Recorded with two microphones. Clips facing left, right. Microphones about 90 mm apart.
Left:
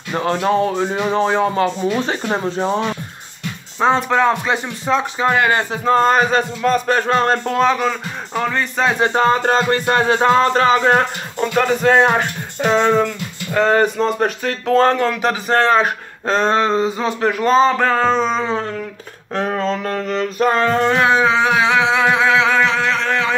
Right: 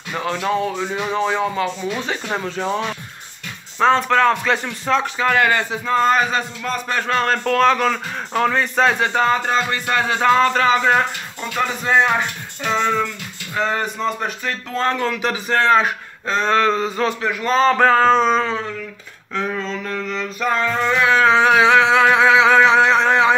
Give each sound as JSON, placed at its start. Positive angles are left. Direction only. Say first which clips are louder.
{"t": 0.1, "sound": "speech", "louder": "left 4 dB", "side_deg": 35}
{"t": 2.2, "sound": "speech", "louder": "left 4 dB", "side_deg": 25}
{"t": 3.8, "sound": "speech", "louder": "even", "side_deg": 15}
{"t": 5.7, "sound": "speech", "louder": "left 3 dB", "side_deg": 40}
{"t": 9.0, "sound": "music", "louder": "left 3 dB", "side_deg": 35}
{"t": 14.8, "sound": "music", "louder": "left 4 dB", "side_deg": 45}
{"t": 16.4, "sound": "speech", "louder": "even", "side_deg": 25}
{"t": 17.2, "sound": "speech", "louder": "left 5 dB", "side_deg": 40}
{"t": 17.6, "sound": "a sound", "louder": "right 2 dB", "side_deg": 0}
{"t": 19.3, "sound": "a sound", "louder": "left 4 dB", "side_deg": 60}
{"t": 21.3, "sound": "a sound", "louder": "right 2 dB", "side_deg": 0}